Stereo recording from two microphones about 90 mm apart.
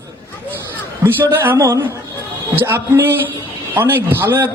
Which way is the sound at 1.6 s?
40° right (ahead or behind).